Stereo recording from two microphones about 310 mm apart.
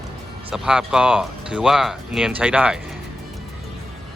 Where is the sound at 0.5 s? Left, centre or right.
Centre.